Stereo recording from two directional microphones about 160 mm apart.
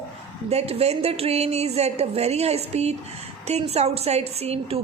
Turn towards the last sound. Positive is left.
turn(degrees=-40)  # may be behind; listen again after turning